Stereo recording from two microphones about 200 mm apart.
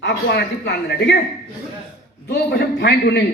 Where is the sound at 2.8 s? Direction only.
55° left (ahead or behind).